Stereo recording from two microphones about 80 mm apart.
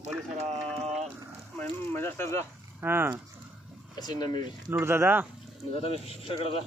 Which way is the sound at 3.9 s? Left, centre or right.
Left.